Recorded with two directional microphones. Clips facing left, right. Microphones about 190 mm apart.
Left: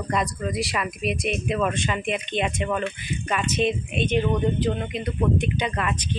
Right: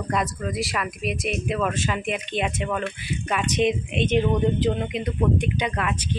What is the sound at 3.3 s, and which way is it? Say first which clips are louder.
Speech: right 1 dB; 15° right (ahead or behind).